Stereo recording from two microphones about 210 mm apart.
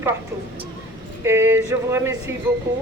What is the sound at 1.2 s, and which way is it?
Speech, 10° right (ahead or behind).